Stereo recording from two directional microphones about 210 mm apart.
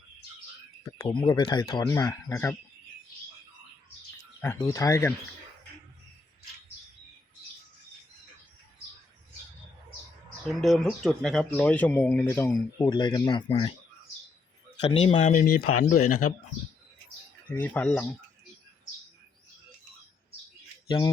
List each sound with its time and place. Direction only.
1.0 s speech: 20° left (ahead or behind)
4.4 s speech: 10° left (ahead or behind)
10.6 s speech: centre (ahead or behind); by 13.7 s 25° left (ahead or behind)
14.8 s speech: 25° left (ahead or behind)
15.3 s speech: 40° left (ahead or behind)
17.5 s speech: 10° left (ahead or behind)
20.8 s speech: 20° left (ahead or behind)